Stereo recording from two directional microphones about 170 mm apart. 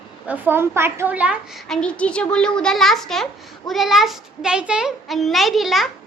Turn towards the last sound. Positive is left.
turn(degrees=0)  # may be behind; listen again after turning